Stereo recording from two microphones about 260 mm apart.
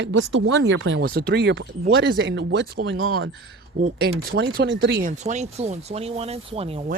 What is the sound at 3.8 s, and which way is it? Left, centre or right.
Speech, right.